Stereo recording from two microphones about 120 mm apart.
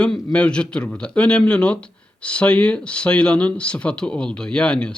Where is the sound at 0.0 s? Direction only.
5° left (ahead or behind).